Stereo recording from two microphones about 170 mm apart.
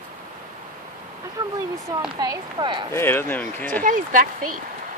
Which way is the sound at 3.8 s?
50° right (ahead or behind).